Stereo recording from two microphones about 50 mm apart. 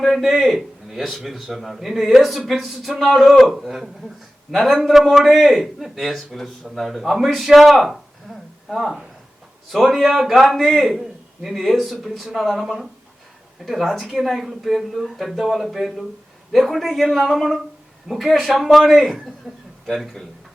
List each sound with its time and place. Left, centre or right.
0.0 s a man's voice: centre